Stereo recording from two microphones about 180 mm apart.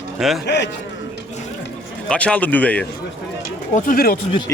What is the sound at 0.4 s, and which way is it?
Speech, 75° left (ahead or behind).